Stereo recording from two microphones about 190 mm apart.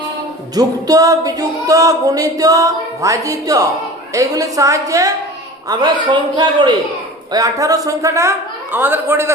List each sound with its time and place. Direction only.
0.5 s music: 20° right (ahead or behind)
5.6 s a man's voice: 20° right (ahead or behind)
7.3 s music: 20° right (ahead or behind)